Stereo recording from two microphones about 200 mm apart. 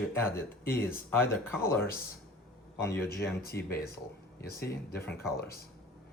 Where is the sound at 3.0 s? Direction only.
50° left (ahead or behind).